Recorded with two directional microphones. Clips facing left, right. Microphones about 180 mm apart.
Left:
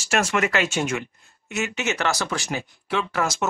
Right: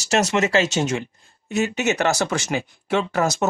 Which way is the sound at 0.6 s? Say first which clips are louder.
Right 2 dB; 40° right (ahead or behind).